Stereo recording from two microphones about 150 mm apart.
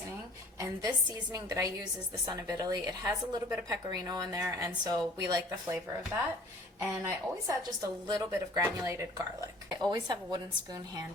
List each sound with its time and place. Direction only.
0.6 s a woman's voice: 25° right (ahead or behind)
8.3 s a woman's voice: 15° right (ahead or behind)